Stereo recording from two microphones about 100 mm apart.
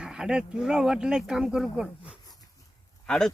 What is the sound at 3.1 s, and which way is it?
Speech, 5° left (ahead or behind).